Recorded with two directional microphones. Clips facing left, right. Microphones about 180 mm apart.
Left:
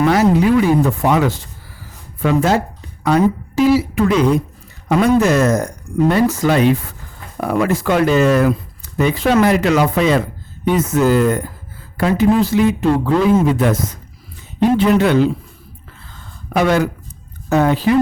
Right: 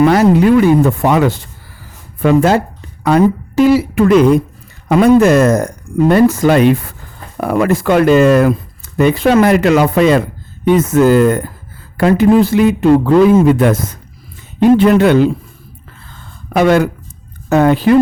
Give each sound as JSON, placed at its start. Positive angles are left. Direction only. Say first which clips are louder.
{"t": 0.0, "sound": "a woman's voice", "louder": "right 4 dB", "side_deg": -55}
{"t": 16.5, "sound": "speech", "louder": "right 4 dB", "side_deg": -60}